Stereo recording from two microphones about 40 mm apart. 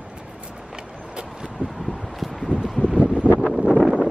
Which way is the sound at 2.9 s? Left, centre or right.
Right.